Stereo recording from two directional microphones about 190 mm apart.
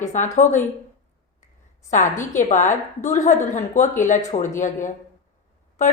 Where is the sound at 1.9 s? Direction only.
40° left (ahead or behind).